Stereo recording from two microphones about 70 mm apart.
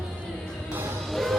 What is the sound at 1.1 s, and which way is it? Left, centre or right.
Music, centre.